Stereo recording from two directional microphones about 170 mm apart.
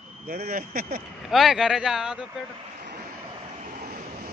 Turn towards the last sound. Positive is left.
turn(degrees=-55)  # may be behind; listen again after turning